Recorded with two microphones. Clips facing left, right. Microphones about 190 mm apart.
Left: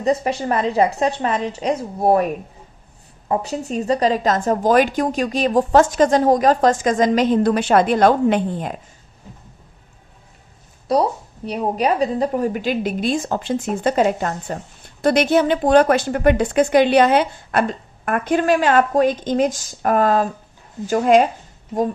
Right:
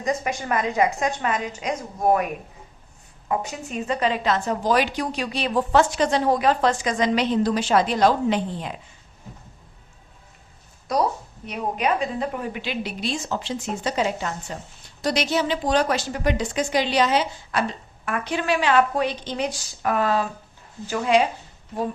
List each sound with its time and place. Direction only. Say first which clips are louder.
0.0 s a woman's voice: left 6 dB; 35° left (ahead or behind); by 8.7 s 50° left (ahead or behind)
10.9 s a woman's voice: left 5 dB; 35° left (ahead or behind); by 21.2 s 50° left (ahead or behind)